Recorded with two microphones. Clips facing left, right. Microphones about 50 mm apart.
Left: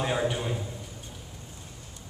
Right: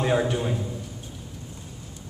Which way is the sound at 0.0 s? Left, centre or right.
Centre.